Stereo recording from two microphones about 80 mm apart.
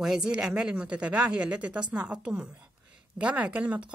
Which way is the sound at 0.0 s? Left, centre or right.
Centre.